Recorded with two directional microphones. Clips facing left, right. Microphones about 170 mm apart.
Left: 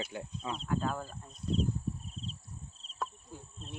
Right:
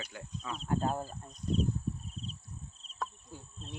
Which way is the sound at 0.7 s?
35° right (ahead or behind).